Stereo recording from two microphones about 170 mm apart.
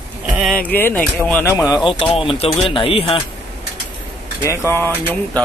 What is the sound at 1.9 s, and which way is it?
Speech, 30° left (ahead or behind).